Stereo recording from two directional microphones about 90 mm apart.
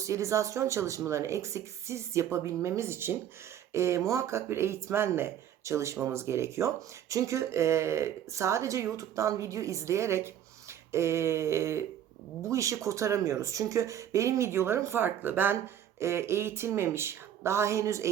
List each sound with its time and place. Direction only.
0.0 s speech: 35° right (ahead or behind)